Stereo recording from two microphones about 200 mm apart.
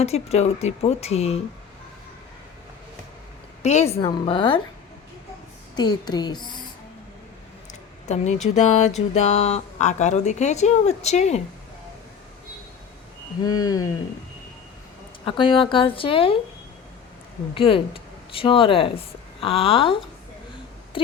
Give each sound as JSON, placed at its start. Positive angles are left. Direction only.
{"t": 0.0, "sound": "speech", "side_deg": 30}
{"t": 3.6, "sound": "a woman's voice", "side_deg": 35}
{"t": 3.8, "sound": "a woman's voice", "side_deg": 25}
{"t": 5.7, "sound": "a woman's voice", "side_deg": 20}
{"t": 7.7, "sound": "speech", "side_deg": 35}
{"t": 13.4, "sound": "a woman's voice", "side_deg": 20}
{"t": 15.2, "sound": "a woman's voice", "side_deg": 25}
{"t": 17.5, "sound": "speech", "side_deg": 25}
{"t": 20.9, "sound": "a sound", "side_deg": 25}